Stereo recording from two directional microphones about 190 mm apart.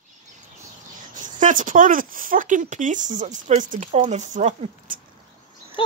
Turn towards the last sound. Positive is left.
turn(degrees=25)  # may be behind; listen again after turning